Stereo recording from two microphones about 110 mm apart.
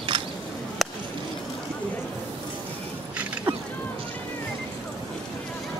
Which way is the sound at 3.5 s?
50° right (ahead or behind).